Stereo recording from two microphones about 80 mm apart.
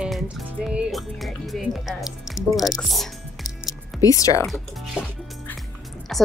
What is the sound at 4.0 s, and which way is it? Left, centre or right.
Speech, left.